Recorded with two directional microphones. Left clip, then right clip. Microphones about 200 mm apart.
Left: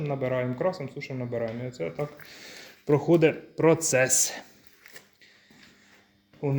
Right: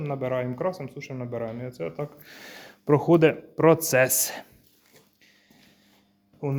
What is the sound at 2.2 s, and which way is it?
Speech, 20° right (ahead or behind).